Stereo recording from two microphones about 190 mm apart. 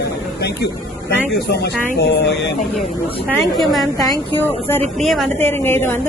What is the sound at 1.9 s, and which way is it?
Speech, 60° left (ahead or behind).